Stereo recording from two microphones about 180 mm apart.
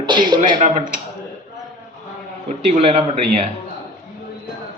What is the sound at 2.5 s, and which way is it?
Speech, 35° right (ahead or behind).